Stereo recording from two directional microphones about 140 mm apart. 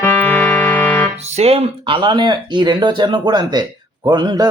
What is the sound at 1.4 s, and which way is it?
Speech, 50° right (ahead or behind).